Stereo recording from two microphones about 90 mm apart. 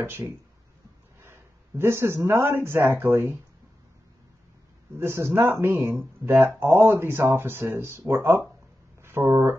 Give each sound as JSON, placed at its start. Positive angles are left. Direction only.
{"t": 0.0, "sound": "speech", "side_deg": -30}
{"t": 4.9, "sound": "speech", "side_deg": -30}